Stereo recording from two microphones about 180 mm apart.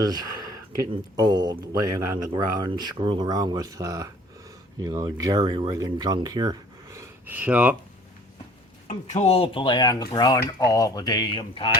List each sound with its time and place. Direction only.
0.0 s speech: 20° right (ahead or behind)
8.9 s speech: 40° left (ahead or behind)